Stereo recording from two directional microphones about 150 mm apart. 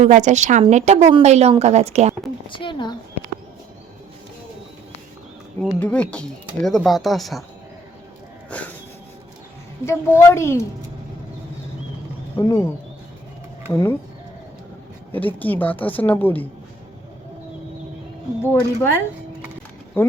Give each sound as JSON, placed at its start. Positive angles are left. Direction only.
{"t": 0.0, "sound": "a woman's voice", "side_deg": -55}
{"t": 2.5, "sound": "speech", "side_deg": 35}
{"t": 5.8, "sound": "speech", "side_deg": 10}
{"t": 9.8, "sound": "speech", "side_deg": 20}
{"t": 12.4, "sound": "speech", "side_deg": 20}
{"t": 15.1, "sound": "speech", "side_deg": 10}
{"t": 18.4, "sound": "speech", "side_deg": 15}